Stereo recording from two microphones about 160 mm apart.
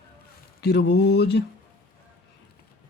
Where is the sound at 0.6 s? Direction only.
90° left.